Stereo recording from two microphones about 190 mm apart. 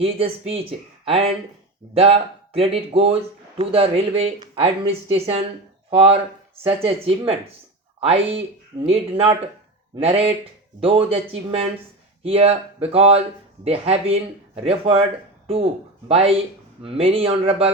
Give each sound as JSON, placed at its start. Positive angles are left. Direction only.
{"t": 0.0, "sound": "speech", "side_deg": -30}